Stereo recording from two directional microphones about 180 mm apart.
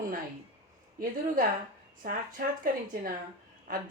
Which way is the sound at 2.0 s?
50° right (ahead or behind).